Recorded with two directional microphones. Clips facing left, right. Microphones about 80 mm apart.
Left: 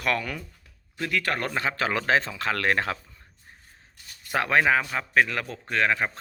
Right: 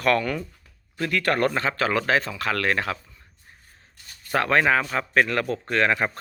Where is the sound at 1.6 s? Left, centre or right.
Centre.